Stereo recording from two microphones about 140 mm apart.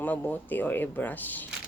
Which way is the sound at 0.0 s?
10° left (ahead or behind).